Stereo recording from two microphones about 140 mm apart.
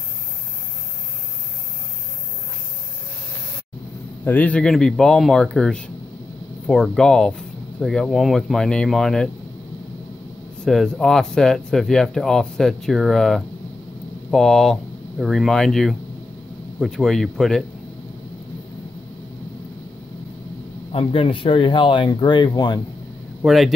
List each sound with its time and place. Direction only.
4.2 s speech: 10° left (ahead or behind)
10.6 s speech: 5° left (ahead or behind)
20.9 s speech: 40° left (ahead or behind)
23.4 s speech: centre (ahead or behind)